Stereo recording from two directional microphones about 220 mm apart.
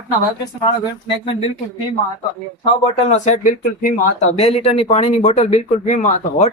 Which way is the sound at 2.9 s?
30° left (ahead or behind).